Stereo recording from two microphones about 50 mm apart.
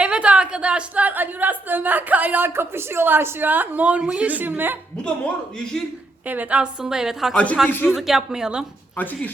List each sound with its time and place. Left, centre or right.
0.0 s a woman's voice: right
1.1 s a woman's voice: right
2.5 s a woman's voice: right
4.4 s a woman's voice: right
5.0 s a man's voice: centre
6.2 s a woman's voice: right
6.8 s a woman's voice: centre
7.3 s a man's voice: left
7.9 s a woman's voice: centre